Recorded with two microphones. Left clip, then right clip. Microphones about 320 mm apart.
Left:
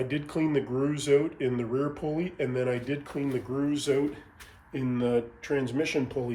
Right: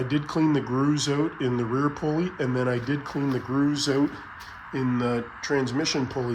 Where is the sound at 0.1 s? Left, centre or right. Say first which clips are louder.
Right 4 dB; centre.